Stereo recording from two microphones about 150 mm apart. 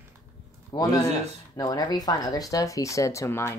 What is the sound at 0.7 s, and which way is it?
A man's voice, 30° left (ahead or behind).